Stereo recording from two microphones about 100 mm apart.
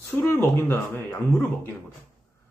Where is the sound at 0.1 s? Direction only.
20° left (ahead or behind).